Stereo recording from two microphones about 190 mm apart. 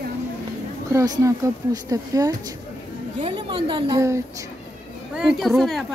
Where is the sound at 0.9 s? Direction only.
20° right (ahead or behind).